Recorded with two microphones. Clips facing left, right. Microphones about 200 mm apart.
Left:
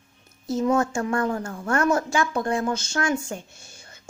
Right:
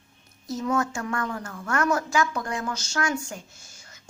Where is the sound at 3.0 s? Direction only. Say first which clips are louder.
Left 2 dB; 25° left (ahead or behind).